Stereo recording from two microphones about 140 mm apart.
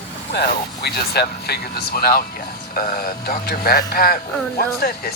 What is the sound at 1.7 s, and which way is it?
Speech, 90° left.